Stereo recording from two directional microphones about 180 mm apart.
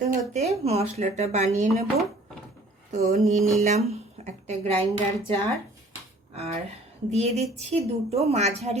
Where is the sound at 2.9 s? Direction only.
40° right (ahead or behind).